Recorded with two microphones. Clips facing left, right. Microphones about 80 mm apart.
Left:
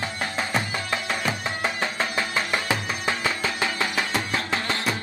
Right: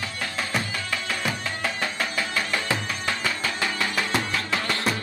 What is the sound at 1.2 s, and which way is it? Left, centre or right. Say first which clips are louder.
Music: left 2 dB; left.